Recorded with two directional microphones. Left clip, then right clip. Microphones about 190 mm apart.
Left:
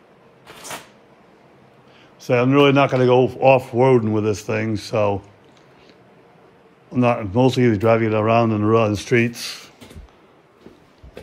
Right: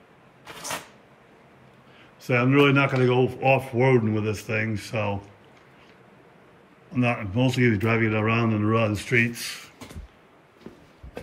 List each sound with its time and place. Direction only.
0.5 s cupboard open or close: 15° left (ahead or behind)
2.2 s speech: 15° left (ahead or behind)
6.9 s a man's voice: 20° left (ahead or behind)